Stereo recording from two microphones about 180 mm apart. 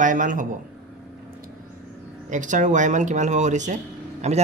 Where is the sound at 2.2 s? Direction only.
45° right (ahead or behind).